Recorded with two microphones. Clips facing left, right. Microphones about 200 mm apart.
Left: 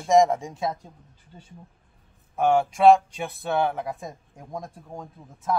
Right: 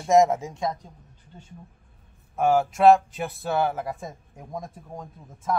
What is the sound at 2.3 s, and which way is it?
Speech, centre (ahead or behind).